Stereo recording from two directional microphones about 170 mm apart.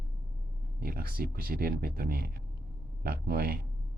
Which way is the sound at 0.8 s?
60° right (ahead or behind).